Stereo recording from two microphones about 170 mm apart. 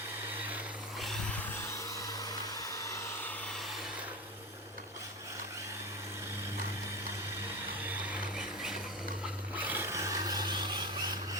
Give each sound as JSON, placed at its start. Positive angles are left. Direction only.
{"t": 0.9, "sound": "vehicle", "side_deg": 0}
{"t": 2.6, "sound": "vehicle", "side_deg": 20}
{"t": 9.6, "sound": "a sound", "side_deg": -10}